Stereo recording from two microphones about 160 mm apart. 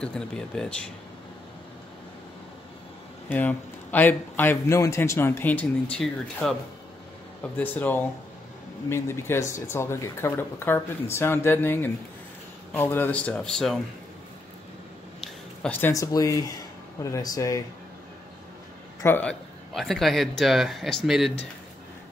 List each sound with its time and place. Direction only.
0.6 s speech: 5° left (ahead or behind)
3.3 s a man's voice: 10° left (ahead or behind)
7.5 s a man's voice: 10° left (ahead or behind)
15.1 s a sound: 10° left (ahead or behind)
15.9 s speech: 20° left (ahead or behind)
19.0 s a man's voice: 10° left (ahead or behind)
19.7 s speech: centre (ahead or behind)